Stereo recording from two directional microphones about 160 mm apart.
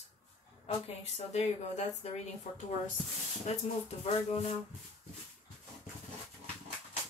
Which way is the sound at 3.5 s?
45° left (ahead or behind).